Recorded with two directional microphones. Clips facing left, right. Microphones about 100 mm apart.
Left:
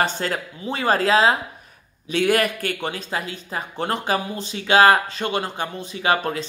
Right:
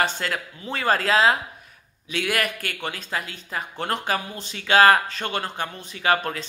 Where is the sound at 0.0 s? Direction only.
25° left (ahead or behind).